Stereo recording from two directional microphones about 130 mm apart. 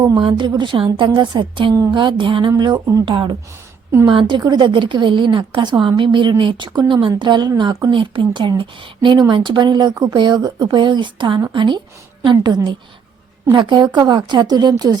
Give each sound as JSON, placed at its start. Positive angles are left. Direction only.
{"t": 0.0, "sound": "speech", "side_deg": -40}
{"t": 3.1, "sound": "speech", "side_deg": -40}